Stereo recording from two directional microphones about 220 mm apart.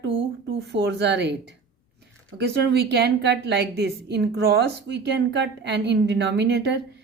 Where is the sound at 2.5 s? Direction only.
50° right (ahead or behind).